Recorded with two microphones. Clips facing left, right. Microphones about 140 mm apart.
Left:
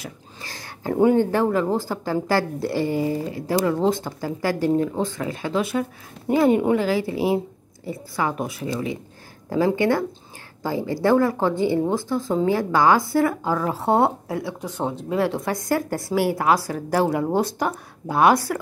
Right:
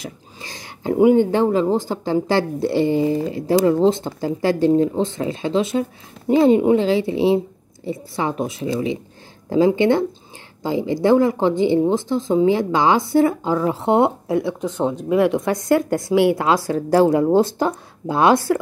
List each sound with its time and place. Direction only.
0.0 s speech: 20° right (ahead or behind)